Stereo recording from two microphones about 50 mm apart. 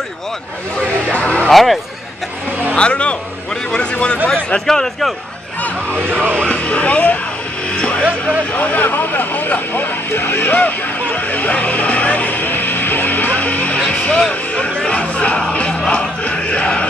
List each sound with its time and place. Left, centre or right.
1.0 s music: left
1.5 s speech: centre
2.7 s speech: left
4.6 s a man's voice: centre
5.9 s music: right
6.4 s music: left
8.5 s vehicle: left
13.7 s music: left
14.3 s a sound: left
14.8 s music: left
15.9 s crowd: left